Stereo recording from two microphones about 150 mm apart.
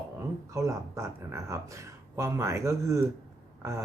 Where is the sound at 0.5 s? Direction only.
20° right (ahead or behind).